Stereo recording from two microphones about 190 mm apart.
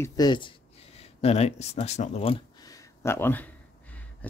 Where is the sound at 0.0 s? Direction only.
20° left (ahead or behind).